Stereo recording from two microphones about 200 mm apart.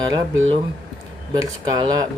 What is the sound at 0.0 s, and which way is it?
Speech, 20° right (ahead or behind).